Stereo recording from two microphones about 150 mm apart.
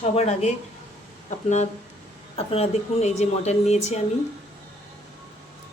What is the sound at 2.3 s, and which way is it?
A woman's voice, 40° left (ahead or behind).